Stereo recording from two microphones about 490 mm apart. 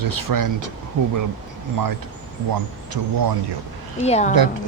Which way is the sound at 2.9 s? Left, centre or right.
Right.